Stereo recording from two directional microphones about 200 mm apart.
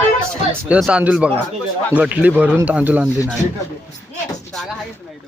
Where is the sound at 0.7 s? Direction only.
5° right (ahead or behind).